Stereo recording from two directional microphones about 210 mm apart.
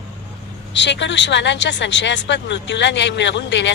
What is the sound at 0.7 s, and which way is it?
Speech, 60° left (ahead or behind).